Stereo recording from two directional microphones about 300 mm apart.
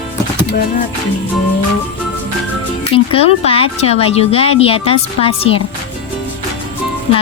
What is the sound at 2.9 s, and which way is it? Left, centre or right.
Speech, centre.